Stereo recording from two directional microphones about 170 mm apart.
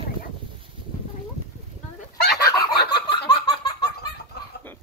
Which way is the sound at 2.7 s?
70° left (ahead or behind).